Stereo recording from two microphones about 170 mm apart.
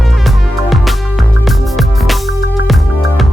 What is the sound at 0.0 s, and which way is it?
Music, centre (ahead or behind).